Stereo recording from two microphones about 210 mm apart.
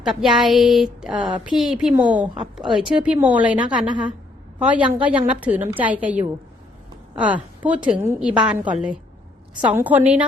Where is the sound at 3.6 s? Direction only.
20° right (ahead or behind).